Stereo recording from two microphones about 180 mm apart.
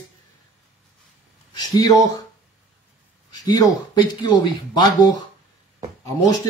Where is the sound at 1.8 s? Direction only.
20° left (ahead or behind).